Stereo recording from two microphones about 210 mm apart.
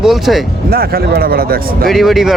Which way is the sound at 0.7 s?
45° right (ahead or behind).